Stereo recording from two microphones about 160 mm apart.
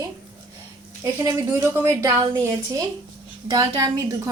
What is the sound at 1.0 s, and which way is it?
A woman's voice, 20° right (ahead or behind).